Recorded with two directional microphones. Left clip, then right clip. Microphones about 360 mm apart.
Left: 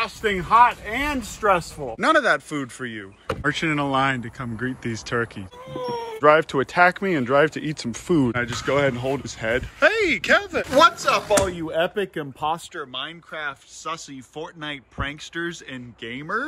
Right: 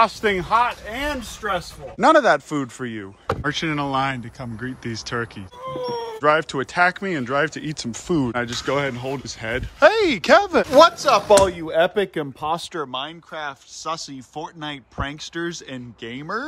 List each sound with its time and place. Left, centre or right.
0.2 s speech: centre
0.5 s speech: centre
2.0 s speech: centre
3.4 s speech: centre
11.2 s speech: right
11.6 s speech: centre